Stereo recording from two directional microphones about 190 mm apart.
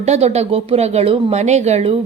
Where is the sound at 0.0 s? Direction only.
35° right (ahead or behind).